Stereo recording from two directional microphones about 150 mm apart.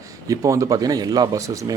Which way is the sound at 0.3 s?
20° right (ahead or behind).